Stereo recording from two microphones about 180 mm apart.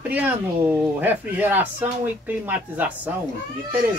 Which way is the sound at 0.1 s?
10° right (ahead or behind).